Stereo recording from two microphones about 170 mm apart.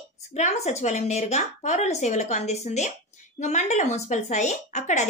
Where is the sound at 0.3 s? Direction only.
45° left (ahead or behind).